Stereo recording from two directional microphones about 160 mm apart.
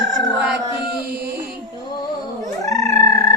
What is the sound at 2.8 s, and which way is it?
Music, 20° left (ahead or behind).